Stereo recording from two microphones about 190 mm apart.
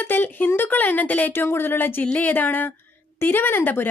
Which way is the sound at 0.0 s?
10° left (ahead or behind).